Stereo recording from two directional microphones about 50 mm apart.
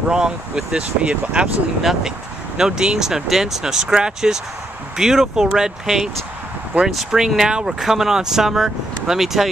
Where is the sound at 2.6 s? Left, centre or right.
Centre.